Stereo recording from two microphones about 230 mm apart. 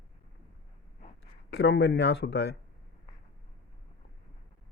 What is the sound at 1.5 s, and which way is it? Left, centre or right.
Speech, left.